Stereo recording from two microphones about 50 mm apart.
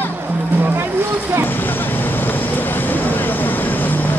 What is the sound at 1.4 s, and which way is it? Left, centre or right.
Vehicle, left.